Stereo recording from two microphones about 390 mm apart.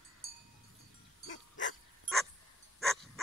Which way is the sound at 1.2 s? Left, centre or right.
Left.